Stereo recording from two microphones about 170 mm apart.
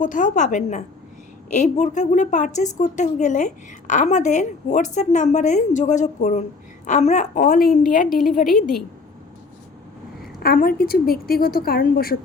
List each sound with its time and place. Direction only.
0.0 s a woman's voice: 50° left (ahead or behind)
10.4 s a woman's voice: 60° left (ahead or behind)